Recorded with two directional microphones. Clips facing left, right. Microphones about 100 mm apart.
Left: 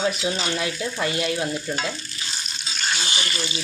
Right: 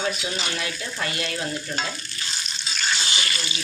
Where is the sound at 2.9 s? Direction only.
20° left (ahead or behind).